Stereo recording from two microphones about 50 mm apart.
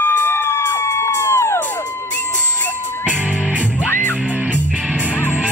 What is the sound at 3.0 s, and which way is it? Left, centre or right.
Music, right.